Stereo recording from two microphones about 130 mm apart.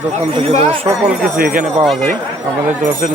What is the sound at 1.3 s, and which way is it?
Speech, 90° right.